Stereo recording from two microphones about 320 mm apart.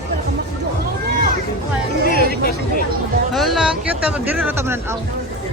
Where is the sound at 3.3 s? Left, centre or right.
Centre.